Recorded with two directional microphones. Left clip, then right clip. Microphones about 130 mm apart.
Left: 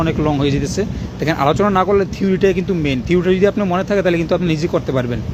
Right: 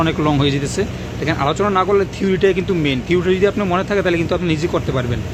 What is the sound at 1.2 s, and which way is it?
Speech, 50° left (ahead or behind).